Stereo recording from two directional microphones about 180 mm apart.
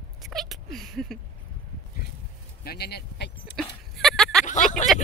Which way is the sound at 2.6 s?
65° left (ahead or behind).